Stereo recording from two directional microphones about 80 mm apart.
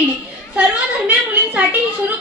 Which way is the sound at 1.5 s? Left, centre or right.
Right.